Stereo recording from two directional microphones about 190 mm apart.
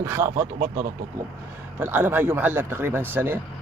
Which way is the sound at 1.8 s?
10° right (ahead or behind).